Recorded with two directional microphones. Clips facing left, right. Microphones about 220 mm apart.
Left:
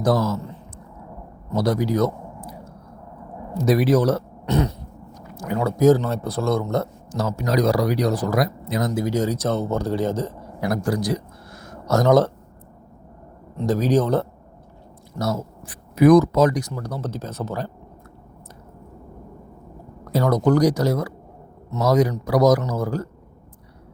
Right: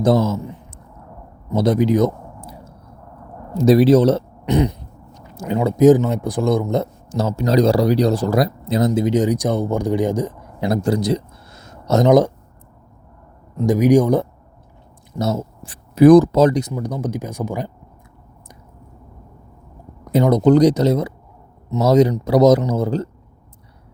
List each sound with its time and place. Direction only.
0.0 s a man's voice: 25° right (ahead or behind)
3.6 s speech: 30° right (ahead or behind)
13.7 s speech: 15° right (ahead or behind)
15.2 s speech: 25° right (ahead or behind)
20.1 s speech: 20° right (ahead or behind)